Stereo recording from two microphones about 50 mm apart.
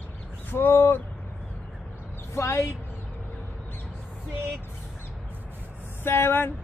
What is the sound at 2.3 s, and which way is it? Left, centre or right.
Speech, left.